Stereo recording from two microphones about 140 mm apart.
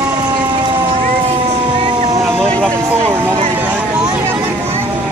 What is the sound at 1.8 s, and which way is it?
Vehicle, 55° right (ahead or behind).